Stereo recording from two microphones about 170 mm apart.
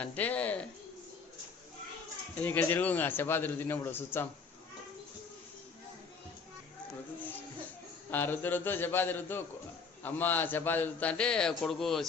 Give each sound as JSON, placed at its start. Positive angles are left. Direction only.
{"t": 0.0, "sound": "speech", "side_deg": 10}
{"t": 2.4, "sound": "a man's voice", "side_deg": 10}
{"t": 8.1, "sound": "a man's voice", "side_deg": 10}